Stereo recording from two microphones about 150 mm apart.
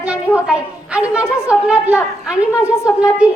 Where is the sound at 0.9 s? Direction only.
5° right (ahead or behind).